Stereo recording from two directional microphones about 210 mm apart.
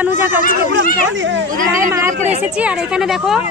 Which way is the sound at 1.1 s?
60° right (ahead or behind).